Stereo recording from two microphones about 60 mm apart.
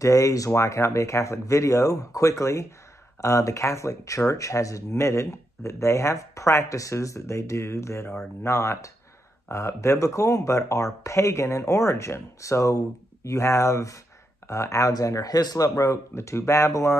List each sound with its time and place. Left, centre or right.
0.0 s speech: left
0.5 s speech: left